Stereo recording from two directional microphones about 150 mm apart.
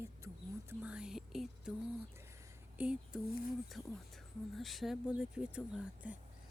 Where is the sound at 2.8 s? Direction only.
5° right (ahead or behind).